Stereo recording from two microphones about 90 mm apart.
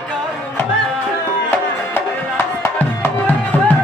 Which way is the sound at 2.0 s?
25° left (ahead or behind).